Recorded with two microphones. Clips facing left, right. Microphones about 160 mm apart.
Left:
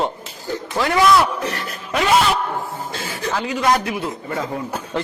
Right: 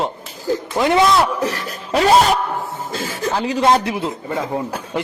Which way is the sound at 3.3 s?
30° right (ahead or behind).